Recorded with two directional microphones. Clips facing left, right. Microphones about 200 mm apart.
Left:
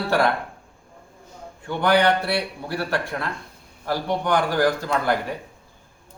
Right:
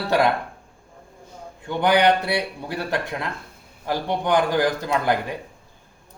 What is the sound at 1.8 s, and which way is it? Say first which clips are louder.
Speech: right 1 dB; 20° right (ahead or behind).